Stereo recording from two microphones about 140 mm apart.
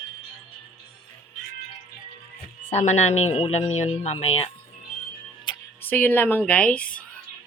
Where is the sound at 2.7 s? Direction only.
55° left (ahead or behind).